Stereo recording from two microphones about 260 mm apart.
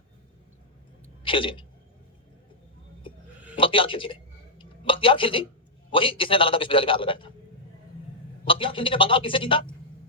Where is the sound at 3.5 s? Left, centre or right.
Centre.